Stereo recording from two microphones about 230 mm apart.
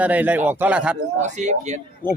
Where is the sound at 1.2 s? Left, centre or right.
Right.